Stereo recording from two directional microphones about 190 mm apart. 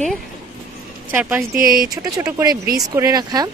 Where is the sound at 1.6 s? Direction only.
50° right (ahead or behind).